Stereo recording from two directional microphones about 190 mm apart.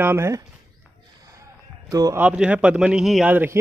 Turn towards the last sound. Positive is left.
turn(degrees=-10)  # may be behind; listen again after turning